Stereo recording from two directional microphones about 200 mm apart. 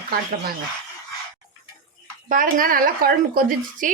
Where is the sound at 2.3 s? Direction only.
40° right (ahead or behind).